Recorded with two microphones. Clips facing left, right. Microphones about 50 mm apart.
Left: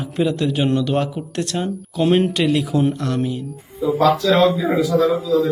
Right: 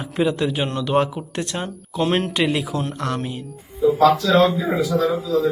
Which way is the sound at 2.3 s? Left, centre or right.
Centre.